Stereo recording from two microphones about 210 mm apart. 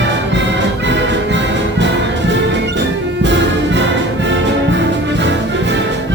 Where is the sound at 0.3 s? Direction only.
60° right (ahead or behind).